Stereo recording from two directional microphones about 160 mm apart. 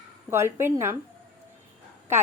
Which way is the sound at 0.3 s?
15° right (ahead or behind).